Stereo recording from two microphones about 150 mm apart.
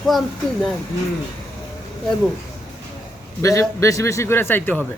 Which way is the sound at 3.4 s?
20° left (ahead or behind).